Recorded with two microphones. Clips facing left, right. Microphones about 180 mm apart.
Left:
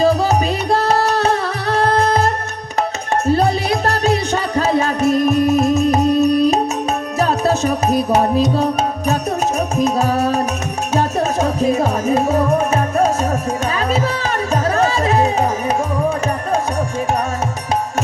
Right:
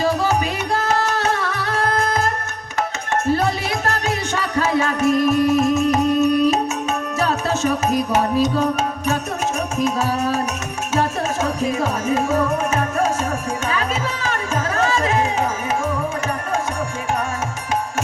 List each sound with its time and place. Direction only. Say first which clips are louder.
0.0 s music: left 4 dB; 35° left (ahead or behind)
3.3 s music: left 5 dB; 35° left (ahead or behind)
9.7 s music: left 4 dB; 40° left (ahead or behind)